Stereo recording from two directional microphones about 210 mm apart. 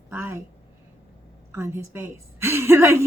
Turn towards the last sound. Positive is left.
turn(degrees=-10)  # may be behind; listen again after turning